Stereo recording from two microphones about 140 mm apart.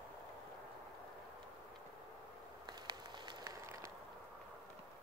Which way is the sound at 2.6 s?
30° right (ahead or behind).